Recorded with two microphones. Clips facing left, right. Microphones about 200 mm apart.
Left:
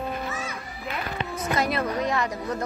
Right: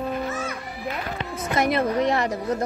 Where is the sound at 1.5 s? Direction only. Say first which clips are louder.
Right 5 dB; 20° right (ahead or behind).